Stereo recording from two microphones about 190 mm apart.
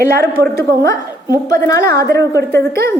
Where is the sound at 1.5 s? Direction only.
15° left (ahead or behind).